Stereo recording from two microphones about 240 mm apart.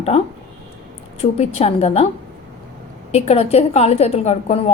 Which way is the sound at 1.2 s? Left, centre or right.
Left.